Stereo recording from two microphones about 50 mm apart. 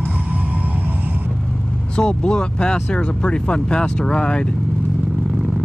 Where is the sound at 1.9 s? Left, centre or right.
Centre.